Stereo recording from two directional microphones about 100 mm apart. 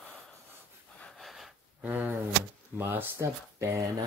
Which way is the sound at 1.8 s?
15° right (ahead or behind).